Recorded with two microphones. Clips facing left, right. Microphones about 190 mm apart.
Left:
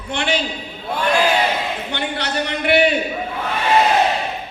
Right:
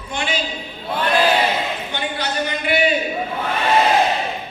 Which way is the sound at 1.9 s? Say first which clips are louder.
Left 1 dB; 70° left (ahead or behind).